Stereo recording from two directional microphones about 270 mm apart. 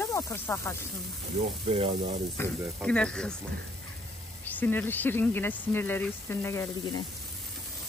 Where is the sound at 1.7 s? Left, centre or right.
Right.